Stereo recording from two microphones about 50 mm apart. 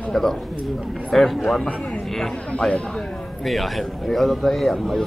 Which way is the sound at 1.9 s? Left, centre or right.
Centre.